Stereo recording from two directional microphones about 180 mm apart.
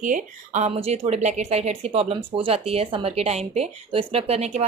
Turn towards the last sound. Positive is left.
turn(degrees=-35)  # may be behind; listen again after turning